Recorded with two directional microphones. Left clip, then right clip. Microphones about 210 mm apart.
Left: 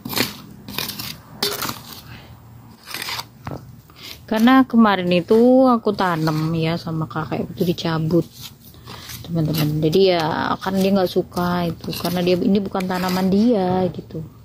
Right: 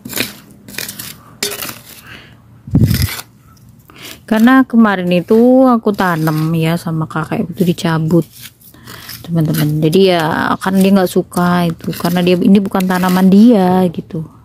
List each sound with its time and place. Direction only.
1.4 s dishes: 20° right (ahead or behind)
4.4 s speech: 35° right (ahead or behind)
9.2 s a sound: 45° right (ahead or behind)
9.8 s speech: 45° right (ahead or behind)